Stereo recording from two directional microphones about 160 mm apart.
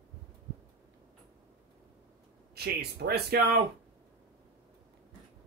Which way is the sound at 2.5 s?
80° right.